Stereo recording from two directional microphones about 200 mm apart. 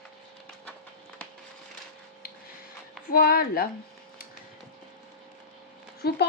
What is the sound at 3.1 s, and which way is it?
Speech, 45° left (ahead or behind).